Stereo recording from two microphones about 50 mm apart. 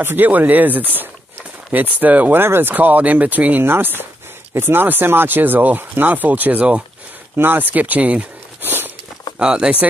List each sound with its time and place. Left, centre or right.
0.0 s speech: right
2.4 s speech: right
2.7 s speech: right
3.6 s speech: right
7.3 s speech: right
8.6 s a sound: right
9.4 s speech: centre